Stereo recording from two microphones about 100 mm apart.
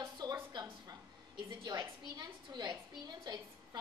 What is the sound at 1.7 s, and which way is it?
A woman's voice, 45° right (ahead or behind).